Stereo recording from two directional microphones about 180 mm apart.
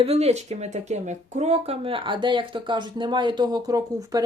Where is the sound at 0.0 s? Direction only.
35° right (ahead or behind).